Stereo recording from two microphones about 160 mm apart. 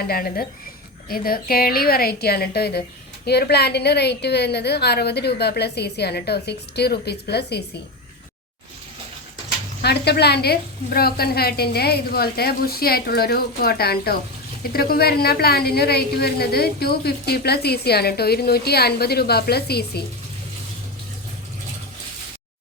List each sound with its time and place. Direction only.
0.1 s a woman's voice: 65° left (ahead or behind); by 7.6 s 90° left
9.8 s a woman's voice: 90° left